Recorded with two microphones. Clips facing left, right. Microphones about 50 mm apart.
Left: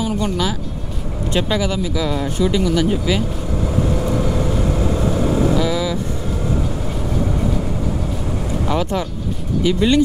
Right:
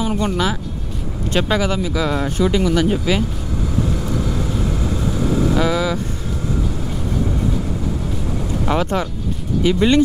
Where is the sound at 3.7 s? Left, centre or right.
Centre.